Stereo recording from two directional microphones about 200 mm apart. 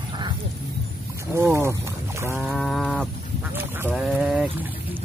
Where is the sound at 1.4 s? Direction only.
15° right (ahead or behind).